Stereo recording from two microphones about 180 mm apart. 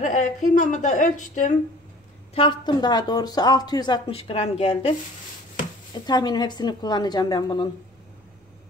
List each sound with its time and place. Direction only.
0.0 s a woman's voice: 45° left (ahead or behind)
2.3 s speech: 25° left (ahead or behind)
6.0 s speech: 25° left (ahead or behind)